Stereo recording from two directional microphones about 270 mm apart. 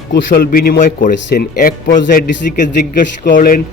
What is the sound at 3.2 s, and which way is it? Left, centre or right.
Speech, left.